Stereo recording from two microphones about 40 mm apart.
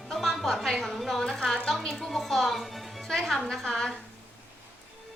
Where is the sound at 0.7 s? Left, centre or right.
Centre.